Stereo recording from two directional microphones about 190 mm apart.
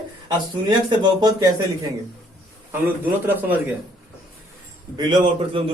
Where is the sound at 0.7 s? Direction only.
20° right (ahead or behind).